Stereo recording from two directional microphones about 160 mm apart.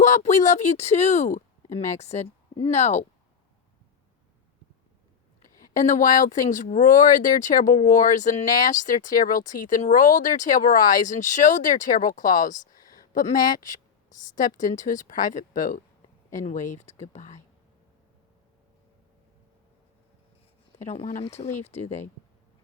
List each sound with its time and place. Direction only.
0.0 s speech: 50° left (ahead or behind)
5.7 s a woman's voice: 50° left (ahead or behind)
20.7 s speech: 40° left (ahead or behind)